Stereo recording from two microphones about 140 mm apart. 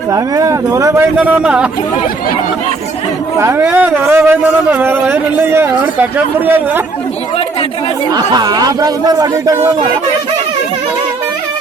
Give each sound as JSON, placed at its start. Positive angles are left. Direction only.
{"t": 0.1, "sound": "speech", "side_deg": -25}
{"t": 1.1, "sound": "speech", "side_deg": -10}
{"t": 3.3, "sound": "speech", "side_deg": -20}
{"t": 8.1, "sound": "speech", "side_deg": -30}